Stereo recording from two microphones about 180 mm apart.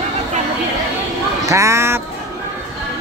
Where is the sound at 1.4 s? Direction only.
15° right (ahead or behind).